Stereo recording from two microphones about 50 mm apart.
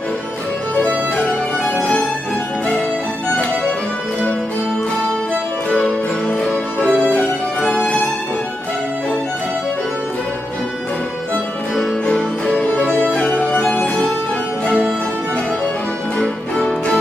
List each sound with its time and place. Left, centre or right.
1.8 s music: centre
6.2 s music: centre
11.7 s music: centre
12.7 s music: left
16.2 s music: centre